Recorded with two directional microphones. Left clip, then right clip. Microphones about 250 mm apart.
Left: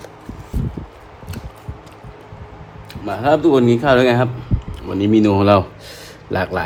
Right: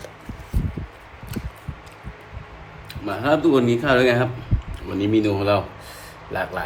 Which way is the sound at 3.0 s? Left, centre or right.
Centre.